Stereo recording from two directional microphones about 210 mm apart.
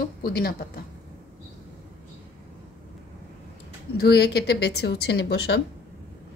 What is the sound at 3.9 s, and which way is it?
Speech, 50° left (ahead or behind).